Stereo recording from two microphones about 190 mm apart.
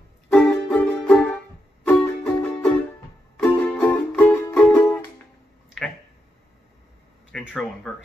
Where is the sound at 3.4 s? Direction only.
5° left (ahead or behind).